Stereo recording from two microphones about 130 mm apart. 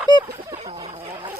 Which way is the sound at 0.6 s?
40° right (ahead or behind).